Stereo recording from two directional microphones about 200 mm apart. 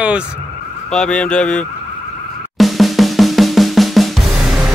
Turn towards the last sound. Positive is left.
turn(degrees=0)  # may be behind; listen again after turning